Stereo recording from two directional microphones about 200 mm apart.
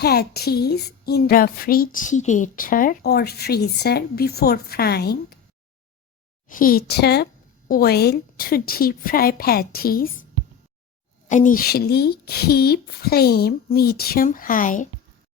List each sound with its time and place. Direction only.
0.0 s a woman's voice: 50° left (ahead or behind)
6.5 s a woman's voice: 45° left (ahead or behind)
11.3 s a woman's voice: 40° left (ahead or behind)